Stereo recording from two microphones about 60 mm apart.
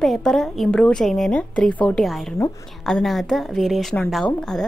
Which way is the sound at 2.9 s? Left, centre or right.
Centre.